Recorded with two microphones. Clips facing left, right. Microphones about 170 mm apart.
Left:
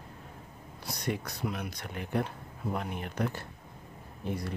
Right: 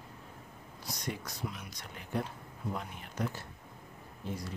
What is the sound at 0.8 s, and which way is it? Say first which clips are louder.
Speech: left 5 dB; 60° left (ahead or behind).